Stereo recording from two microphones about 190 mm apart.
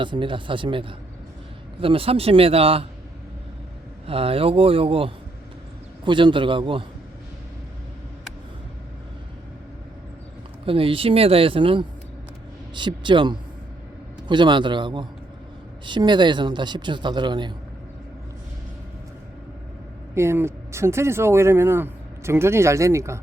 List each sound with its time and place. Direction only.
0.0 s a man's voice: 25° right (ahead or behind)
4.0 s a man's voice: 30° right (ahead or behind)
10.7 s a man's voice: 30° right (ahead or behind)
20.1 s speech: 15° right (ahead or behind)